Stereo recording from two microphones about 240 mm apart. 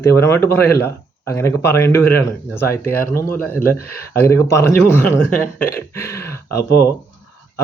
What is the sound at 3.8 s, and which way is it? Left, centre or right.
Speech, left.